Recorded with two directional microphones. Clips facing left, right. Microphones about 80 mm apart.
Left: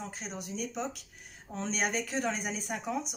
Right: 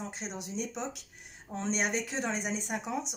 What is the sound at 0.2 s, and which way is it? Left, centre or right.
Speech, right.